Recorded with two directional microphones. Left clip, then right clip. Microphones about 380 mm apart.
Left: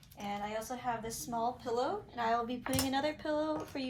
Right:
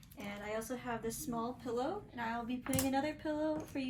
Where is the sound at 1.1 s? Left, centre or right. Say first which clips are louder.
Left 4 dB; centre.